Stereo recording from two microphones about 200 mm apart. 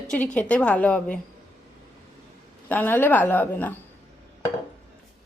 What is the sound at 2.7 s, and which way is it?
A woman's voice, 10° left (ahead or behind).